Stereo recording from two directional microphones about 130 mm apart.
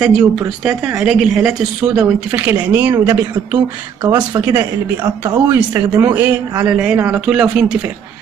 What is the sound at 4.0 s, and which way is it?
Speech, 35° right (ahead or behind).